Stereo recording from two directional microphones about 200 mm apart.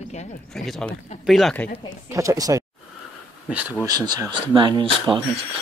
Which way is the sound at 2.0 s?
15° right (ahead or behind).